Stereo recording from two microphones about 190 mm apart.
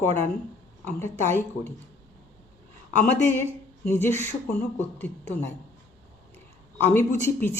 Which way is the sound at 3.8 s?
10° left (ahead or behind).